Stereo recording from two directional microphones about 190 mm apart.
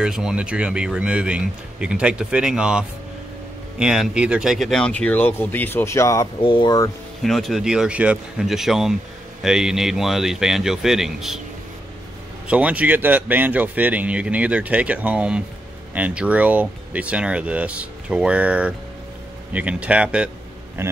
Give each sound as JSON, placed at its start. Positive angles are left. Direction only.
{"t": 0.0, "sound": "speech", "side_deg": -5}
{"t": 7.2, "sound": "speech", "side_deg": 0}
{"t": 12.4, "sound": "a man's voice", "side_deg": -5}